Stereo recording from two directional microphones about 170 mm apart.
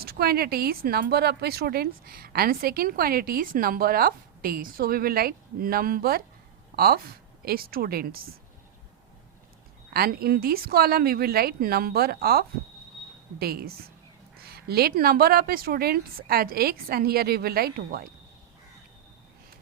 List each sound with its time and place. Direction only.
0.0 s speech: 65° right (ahead or behind)
9.9 s speech: 65° right (ahead or behind)